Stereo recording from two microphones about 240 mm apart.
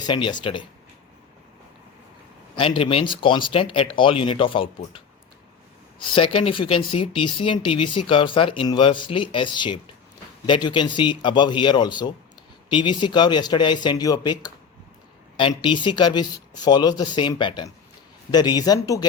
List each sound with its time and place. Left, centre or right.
0.0 s speech: centre
2.6 s speech: left
6.0 s speech: left